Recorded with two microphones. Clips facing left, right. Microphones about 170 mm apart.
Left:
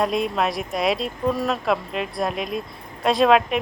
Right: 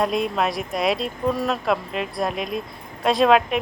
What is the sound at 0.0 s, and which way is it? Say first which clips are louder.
Speech: even; centre (ahead or behind).